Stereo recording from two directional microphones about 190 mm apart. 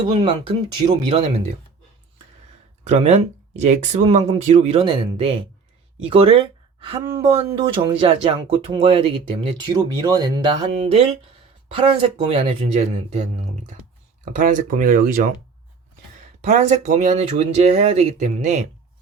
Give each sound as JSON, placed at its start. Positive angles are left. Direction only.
{"t": 0.1, "sound": "speech", "side_deg": -30}
{"t": 2.8, "sound": "speech", "side_deg": -35}
{"t": 7.0, "sound": "speech", "side_deg": -15}
{"t": 7.3, "sound": "speech", "side_deg": -30}
{"t": 12.3, "sound": "speech", "side_deg": -30}
{"t": 16.4, "sound": "speech", "side_deg": -40}